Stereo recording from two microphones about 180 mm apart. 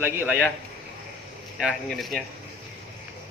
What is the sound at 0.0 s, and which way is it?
Speech, 10° right (ahead or behind).